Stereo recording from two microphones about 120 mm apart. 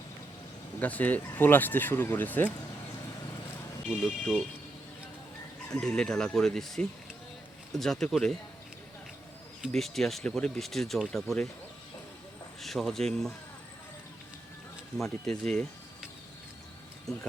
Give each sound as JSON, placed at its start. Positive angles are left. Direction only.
{"t": 0.8, "sound": "speech", "side_deg": 15}
{"t": 3.8, "sound": "speech", "side_deg": 0}
{"t": 5.7, "sound": "speech", "side_deg": 5}
{"t": 9.6, "sound": "speech", "side_deg": 0}
{"t": 12.6, "sound": "speech", "side_deg": 0}
{"t": 14.9, "sound": "speech", "side_deg": 5}